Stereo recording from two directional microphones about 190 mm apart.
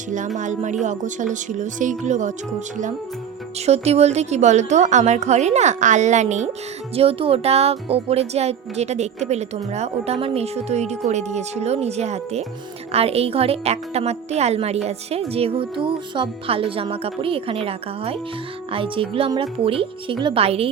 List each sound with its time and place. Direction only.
0.3 s speech: 40° right (ahead or behind)
3.7 s speech: 35° right (ahead or behind)